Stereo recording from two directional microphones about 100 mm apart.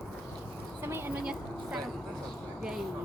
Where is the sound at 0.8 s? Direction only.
25° right (ahead or behind).